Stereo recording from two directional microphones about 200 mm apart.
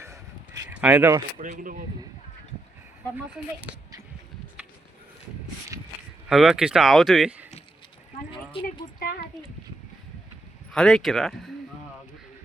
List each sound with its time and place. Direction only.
0.0 s a sound: 15° right (ahead or behind)
0.8 s speech: 10° right (ahead or behind)
1.4 s speech: 40° right (ahead or behind)
6.2 s speech: 5° right (ahead or behind)
8.8 s a sound: 45° left (ahead or behind)
10.7 s speech: centre (ahead or behind)